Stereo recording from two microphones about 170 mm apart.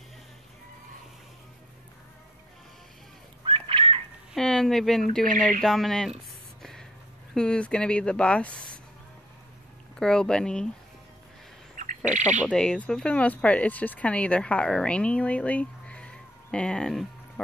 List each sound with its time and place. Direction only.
3.4 s a sound: 30° right (ahead or behind)
4.3 s speech: 5° left (ahead or behind)
6.6 s a sound: centre (ahead or behind)
7.3 s speech: 5° left (ahead or behind)
9.9 s speech: 5° left (ahead or behind)
11.7 s bird: 50° right (ahead or behind)
12.2 s speech: 45° right (ahead or behind)
12.4 s speech: 5° left (ahead or behind)